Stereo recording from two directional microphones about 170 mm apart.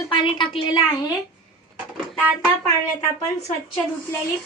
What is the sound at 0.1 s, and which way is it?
Speech, 30° left (ahead or behind).